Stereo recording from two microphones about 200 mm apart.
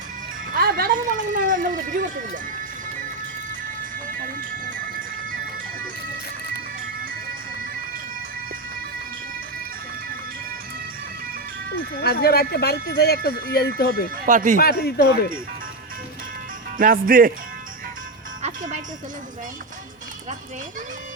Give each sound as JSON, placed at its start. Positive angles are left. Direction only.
{"t": 0.5, "sound": "music", "side_deg": -45}
{"t": 12.0, "sound": "speech", "side_deg": 50}
{"t": 14.3, "sound": "speech", "side_deg": -40}
{"t": 14.6, "sound": "speech", "side_deg": 55}
{"t": 16.7, "sound": "speech", "side_deg": -45}
{"t": 18.4, "sound": "music", "side_deg": -35}